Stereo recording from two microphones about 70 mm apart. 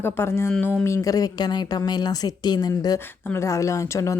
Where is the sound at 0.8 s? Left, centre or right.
Left.